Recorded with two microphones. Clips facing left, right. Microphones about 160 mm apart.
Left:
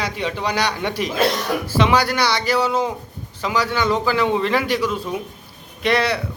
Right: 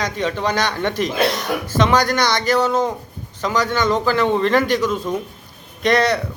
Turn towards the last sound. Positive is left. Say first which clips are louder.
# right 3 dB
turn(degrees=5)  # may be behind; listen again after turning